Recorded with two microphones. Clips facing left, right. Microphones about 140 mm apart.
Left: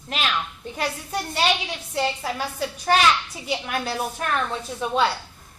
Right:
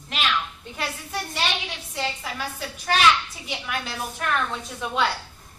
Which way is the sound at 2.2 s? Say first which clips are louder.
Left 5 dB; 35° left (ahead or behind).